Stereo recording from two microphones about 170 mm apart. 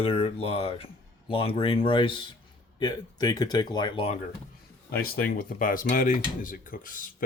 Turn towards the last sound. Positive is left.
turn(degrees=55)  # may be behind; listen again after turning